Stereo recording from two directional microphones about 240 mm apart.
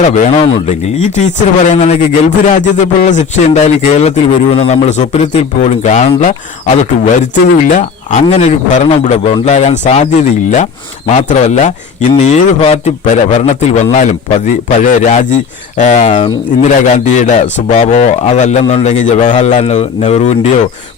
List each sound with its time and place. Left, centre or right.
0.0 s speech: left